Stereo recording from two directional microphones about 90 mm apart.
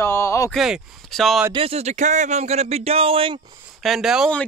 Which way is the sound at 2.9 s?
90° right.